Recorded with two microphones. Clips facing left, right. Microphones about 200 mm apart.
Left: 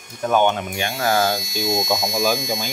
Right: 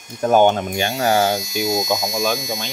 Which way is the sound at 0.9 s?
20° right (ahead or behind).